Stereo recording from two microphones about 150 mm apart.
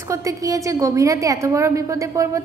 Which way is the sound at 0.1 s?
20° right (ahead or behind).